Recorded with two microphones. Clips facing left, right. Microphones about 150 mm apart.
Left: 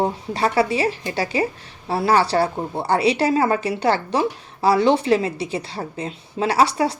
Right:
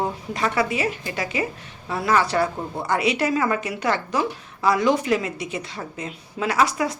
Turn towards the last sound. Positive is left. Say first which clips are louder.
# left 3 dB
turn(degrees=30)  # may be behind; listen again after turning